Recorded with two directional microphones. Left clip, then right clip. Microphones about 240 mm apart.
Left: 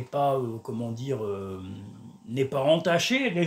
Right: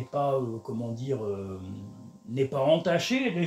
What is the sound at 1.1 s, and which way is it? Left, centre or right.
Mantra, left.